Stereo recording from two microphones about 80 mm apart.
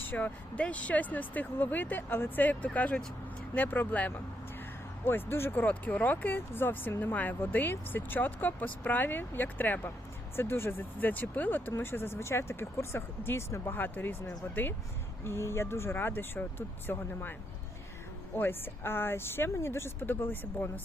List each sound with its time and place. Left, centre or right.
0.0 s speech: left
18.3 s speech: left